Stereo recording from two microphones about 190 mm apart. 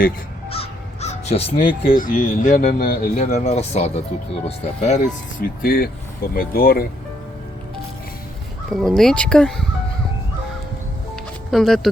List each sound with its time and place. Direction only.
0.5 s crow: 30° left (ahead or behind)
2.0 s speech: 45° left (ahead or behind)
5.4 s speech: 50° left (ahead or behind)
8.7 s speech: centre (ahead or behind)
11.5 s speech: centre (ahead or behind)